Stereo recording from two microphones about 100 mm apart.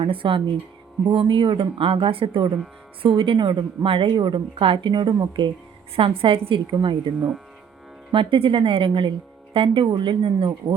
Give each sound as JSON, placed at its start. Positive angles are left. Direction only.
{"t": 0.0, "sound": "a woman's voice", "side_deg": -60}
{"t": 6.0, "sound": "a woman's voice", "side_deg": -65}
{"t": 6.7, "sound": "speech", "side_deg": -50}
{"t": 8.1, "sound": "a woman's voice", "side_deg": -60}